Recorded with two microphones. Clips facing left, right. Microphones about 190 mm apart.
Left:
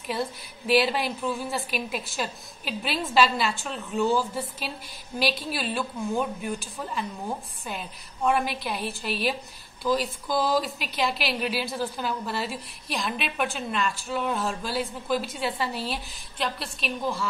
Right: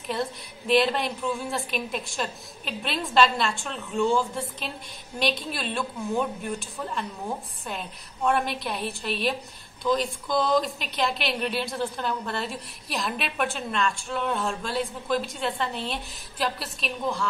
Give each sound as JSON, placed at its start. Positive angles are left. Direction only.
{"t": 0.0, "sound": "a woman's voice", "side_deg": 5}